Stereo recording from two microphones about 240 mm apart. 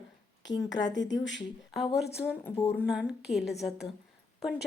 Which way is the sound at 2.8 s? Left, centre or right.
Centre.